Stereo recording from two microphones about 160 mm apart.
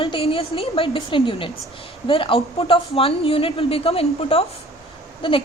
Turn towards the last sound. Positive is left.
turn(degrees=35)  # may be behind; listen again after turning